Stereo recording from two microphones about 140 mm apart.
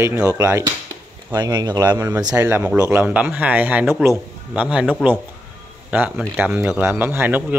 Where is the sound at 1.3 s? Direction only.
30° right (ahead or behind).